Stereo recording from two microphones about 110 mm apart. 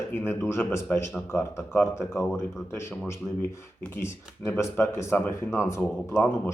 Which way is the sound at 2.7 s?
25° left (ahead or behind).